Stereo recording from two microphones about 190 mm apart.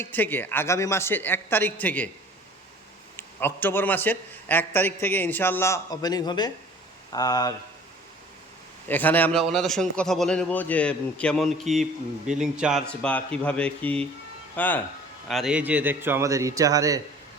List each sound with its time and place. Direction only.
0.0 s a man's voice: 10° left (ahead or behind)
3.2 s a man's voice: 10° left (ahead or behind)
8.9 s a man's voice: 10° left (ahead or behind)
15.3 s a man's voice: centre (ahead or behind); by 17.0 s 20° right (ahead or behind)